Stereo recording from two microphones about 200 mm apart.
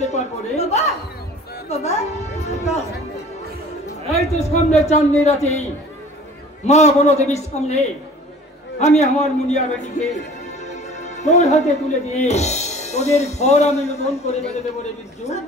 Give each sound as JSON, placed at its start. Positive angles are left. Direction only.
{"t": 0.0, "sound": "a sound", "side_deg": 35}
{"t": 1.7, "sound": "speech", "side_deg": 35}
{"t": 4.1, "sound": "speech", "side_deg": 30}